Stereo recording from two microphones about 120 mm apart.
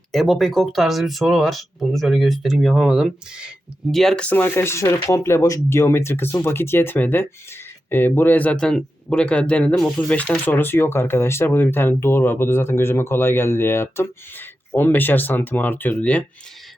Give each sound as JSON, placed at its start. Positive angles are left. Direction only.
{"t": 0.1, "sound": "speech", "side_deg": 0}
{"t": 3.9, "sound": "speech", "side_deg": 5}